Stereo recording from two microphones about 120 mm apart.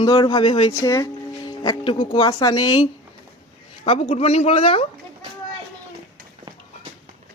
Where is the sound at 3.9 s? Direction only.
55° left (ahead or behind).